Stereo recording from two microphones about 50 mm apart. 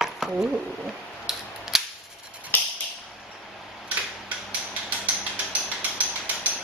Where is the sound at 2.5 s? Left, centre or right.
Left.